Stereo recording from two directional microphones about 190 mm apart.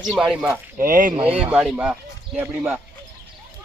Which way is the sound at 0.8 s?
45° right (ahead or behind).